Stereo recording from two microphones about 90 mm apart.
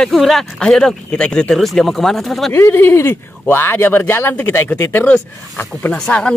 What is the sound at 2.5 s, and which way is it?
Speech, 25° left (ahead or behind).